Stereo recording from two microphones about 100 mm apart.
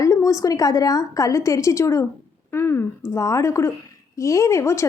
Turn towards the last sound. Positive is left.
turn(degrees=30)  # may be behind; listen again after turning